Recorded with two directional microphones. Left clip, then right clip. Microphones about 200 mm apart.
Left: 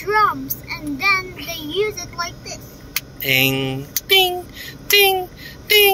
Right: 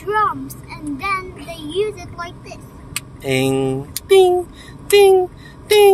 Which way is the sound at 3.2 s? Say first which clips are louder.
Left 1 dB; 40° right (ahead or behind).